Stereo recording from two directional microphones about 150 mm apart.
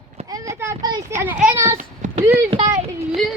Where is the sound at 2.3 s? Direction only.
45° right (ahead or behind).